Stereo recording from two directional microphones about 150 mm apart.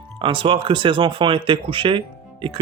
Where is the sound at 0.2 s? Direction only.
35° right (ahead or behind).